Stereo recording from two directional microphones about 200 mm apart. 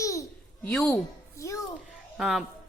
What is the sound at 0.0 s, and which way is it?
Babbling, 15° left (ahead or behind).